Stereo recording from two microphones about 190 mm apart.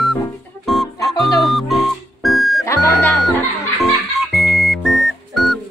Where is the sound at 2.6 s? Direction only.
15° left (ahead or behind).